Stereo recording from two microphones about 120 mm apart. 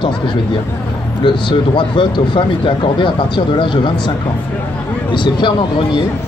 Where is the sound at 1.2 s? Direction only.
45° left (ahead or behind).